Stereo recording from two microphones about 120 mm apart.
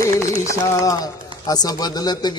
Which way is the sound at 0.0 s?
25° left (ahead or behind).